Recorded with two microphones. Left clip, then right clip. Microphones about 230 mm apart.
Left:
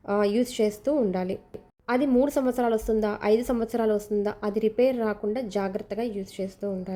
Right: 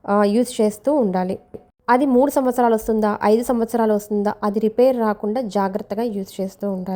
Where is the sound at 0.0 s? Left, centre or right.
Centre.